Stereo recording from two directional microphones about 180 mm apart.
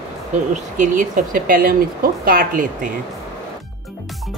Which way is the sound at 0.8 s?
50° right (ahead or behind).